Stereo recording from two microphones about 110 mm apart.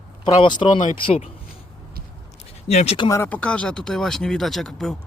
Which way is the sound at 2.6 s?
70° left (ahead or behind).